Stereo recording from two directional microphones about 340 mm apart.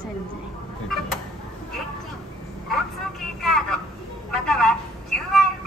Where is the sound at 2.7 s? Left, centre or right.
Centre.